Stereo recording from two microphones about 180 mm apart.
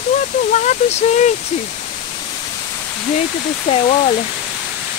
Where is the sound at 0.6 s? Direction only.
40° left (ahead or behind).